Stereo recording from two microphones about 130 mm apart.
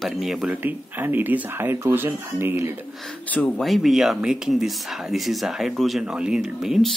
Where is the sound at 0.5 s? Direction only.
15° right (ahead or behind).